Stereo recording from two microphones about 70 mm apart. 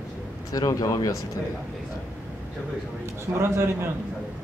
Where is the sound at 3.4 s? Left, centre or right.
Right.